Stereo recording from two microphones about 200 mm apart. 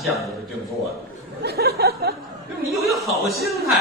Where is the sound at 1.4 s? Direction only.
50° right (ahead or behind).